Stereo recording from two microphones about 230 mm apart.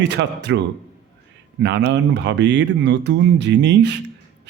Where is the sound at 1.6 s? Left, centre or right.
Right.